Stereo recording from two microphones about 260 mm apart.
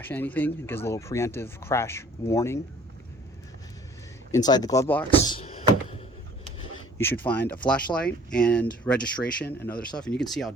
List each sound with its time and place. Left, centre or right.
0.1 s speech: centre
4.3 s speech: centre
5.3 s door: left
7.0 s speech: centre